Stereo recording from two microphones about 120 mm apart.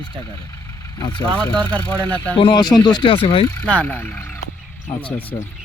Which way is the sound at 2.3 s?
40° left (ahead or behind).